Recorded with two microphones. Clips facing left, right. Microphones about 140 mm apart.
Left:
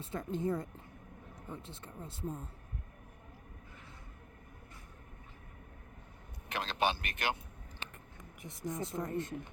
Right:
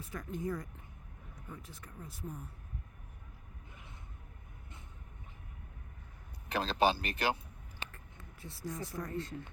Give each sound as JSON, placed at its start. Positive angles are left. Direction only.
{"t": 0.0, "sound": "speech", "side_deg": 30}
{"t": 6.5, "sound": "speech", "side_deg": -35}
{"t": 8.2, "sound": "speech", "side_deg": 20}